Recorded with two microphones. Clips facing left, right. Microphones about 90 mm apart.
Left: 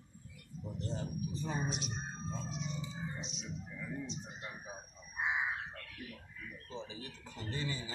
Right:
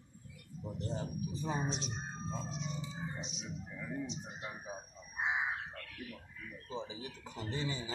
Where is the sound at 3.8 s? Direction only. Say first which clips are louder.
Right 3 dB; 15° right (ahead or behind).